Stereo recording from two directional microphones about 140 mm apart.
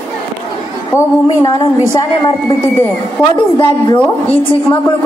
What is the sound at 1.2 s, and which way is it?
Speech, 35° left (ahead or behind).